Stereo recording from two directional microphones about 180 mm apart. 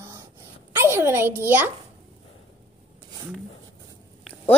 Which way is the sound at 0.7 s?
15° right (ahead or behind).